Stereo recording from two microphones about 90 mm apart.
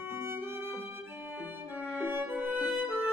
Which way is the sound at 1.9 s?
25° right (ahead or behind).